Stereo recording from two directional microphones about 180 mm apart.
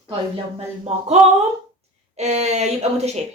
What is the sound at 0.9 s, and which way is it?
Speech, 35° right (ahead or behind).